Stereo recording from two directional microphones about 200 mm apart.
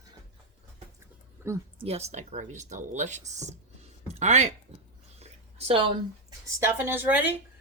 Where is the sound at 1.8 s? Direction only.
30° right (ahead or behind).